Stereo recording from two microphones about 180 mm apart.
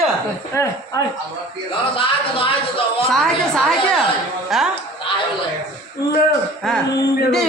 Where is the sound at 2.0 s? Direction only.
30° left (ahead or behind).